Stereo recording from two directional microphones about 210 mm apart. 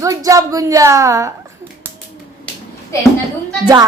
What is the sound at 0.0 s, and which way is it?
A woman's voice, 15° right (ahead or behind).